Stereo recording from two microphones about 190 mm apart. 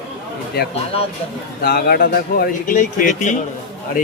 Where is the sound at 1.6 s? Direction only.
55° left (ahead or behind).